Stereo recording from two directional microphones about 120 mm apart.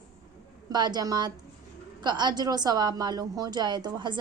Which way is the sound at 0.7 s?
35° right (ahead or behind).